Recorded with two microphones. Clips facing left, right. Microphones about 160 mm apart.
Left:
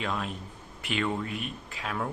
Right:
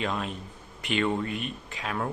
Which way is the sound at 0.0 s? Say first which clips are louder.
Right 2 dB; centre (ahead or behind).